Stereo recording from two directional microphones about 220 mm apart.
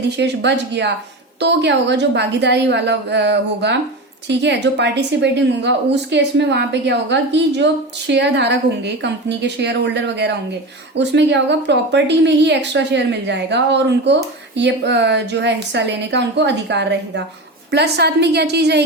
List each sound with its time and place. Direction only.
0.2 s a woman's voice: 50° right (ahead or behind)